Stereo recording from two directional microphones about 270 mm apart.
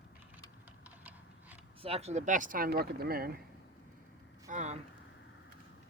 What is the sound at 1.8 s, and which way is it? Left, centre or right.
Speech, right.